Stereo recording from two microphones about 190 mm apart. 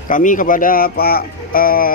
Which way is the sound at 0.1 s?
45° left (ahead or behind).